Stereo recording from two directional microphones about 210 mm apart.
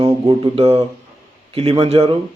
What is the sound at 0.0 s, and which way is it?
Speech, 25° right (ahead or behind).